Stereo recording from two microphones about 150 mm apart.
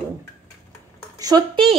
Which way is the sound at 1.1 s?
25° right (ahead or behind).